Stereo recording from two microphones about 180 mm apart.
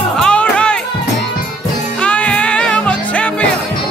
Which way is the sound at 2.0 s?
5° left (ahead or behind).